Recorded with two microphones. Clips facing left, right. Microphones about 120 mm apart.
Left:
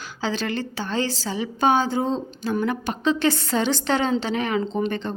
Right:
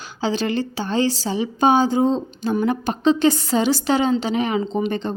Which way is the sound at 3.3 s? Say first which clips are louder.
Right 4 dB; 15° right (ahead or behind).